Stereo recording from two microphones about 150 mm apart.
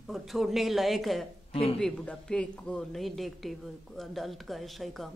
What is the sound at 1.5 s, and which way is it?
Speech, 40° left (ahead or behind).